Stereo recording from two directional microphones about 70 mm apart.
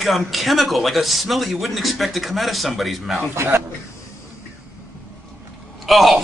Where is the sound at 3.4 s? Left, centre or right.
Right.